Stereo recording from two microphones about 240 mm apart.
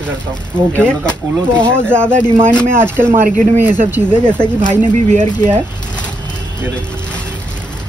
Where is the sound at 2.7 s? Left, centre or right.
Centre.